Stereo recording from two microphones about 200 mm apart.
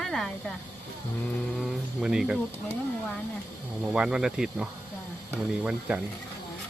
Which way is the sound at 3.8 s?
5° right (ahead or behind).